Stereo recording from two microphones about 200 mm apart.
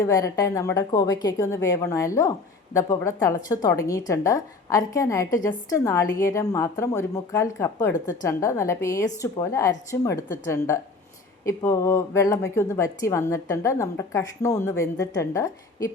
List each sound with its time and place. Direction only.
0.0 s a woman's voice: 15° left (ahead or behind)
11.4 s a woman's voice: 15° left (ahead or behind)